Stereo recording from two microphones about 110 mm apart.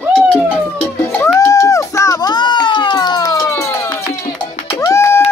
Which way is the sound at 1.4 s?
30° left (ahead or behind).